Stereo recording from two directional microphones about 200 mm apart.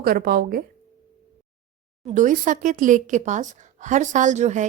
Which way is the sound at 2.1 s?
40° right (ahead or behind).